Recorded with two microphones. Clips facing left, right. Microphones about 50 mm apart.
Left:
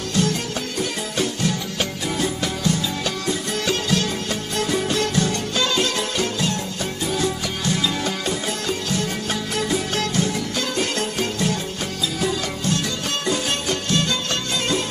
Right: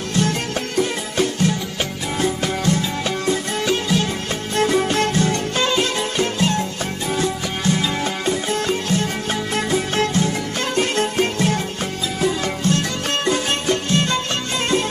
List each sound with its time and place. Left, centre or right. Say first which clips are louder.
0.1 s music: right 2 dB; right
3.6 s music: right 2 dB; centre
4.6 s music: right 5 dB; right